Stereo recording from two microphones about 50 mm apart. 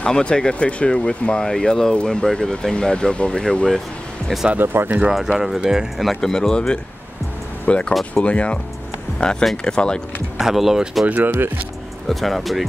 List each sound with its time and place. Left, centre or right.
0.0 s speech: centre
4.6 s speech: right
5.1 s speech: centre
5.9 s speech: centre
6.3 s speech: centre
10.3 s speech: centre
11.1 s speech: right
12.1 s speech: centre